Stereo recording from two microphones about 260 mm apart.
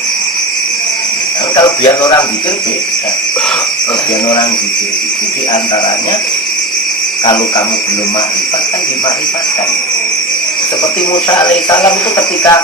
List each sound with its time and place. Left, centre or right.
1.5 s speech: centre
11.1 s speech: centre